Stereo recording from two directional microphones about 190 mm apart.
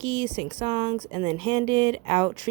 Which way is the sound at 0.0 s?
30° right (ahead or behind).